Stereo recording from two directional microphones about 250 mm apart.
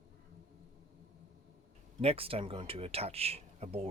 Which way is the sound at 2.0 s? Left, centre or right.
Right.